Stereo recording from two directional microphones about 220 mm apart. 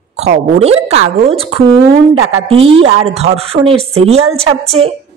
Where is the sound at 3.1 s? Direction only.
30° right (ahead or behind).